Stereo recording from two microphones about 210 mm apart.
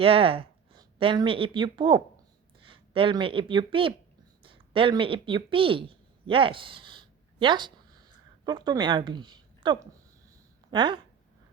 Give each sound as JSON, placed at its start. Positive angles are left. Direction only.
{"t": 0.0, "sound": "a woman's voice", "side_deg": -25}